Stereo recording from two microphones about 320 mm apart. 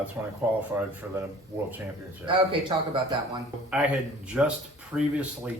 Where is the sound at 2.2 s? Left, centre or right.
Centre.